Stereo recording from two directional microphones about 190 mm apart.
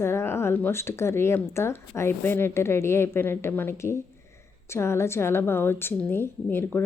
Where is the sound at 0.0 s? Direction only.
15° left (ahead or behind).